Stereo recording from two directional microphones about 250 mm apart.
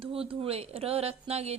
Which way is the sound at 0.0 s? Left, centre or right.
Right.